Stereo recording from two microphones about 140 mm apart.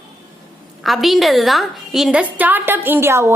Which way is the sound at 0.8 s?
Centre (ahead or behind).